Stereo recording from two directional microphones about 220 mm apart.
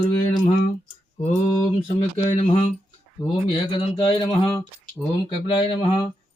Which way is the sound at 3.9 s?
25° left (ahead or behind).